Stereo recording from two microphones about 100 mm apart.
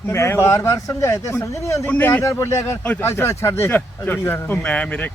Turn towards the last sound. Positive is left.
turn(degrees=10)  # may be behind; listen again after turning